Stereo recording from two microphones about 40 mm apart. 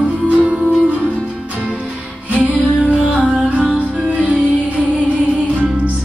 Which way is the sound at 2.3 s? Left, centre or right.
Right.